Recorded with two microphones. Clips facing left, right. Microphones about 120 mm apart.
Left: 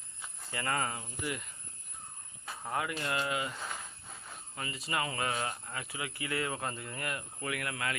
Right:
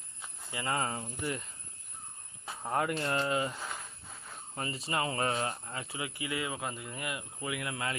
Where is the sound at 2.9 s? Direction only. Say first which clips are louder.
Right 3 dB; 30° right (ahead or behind).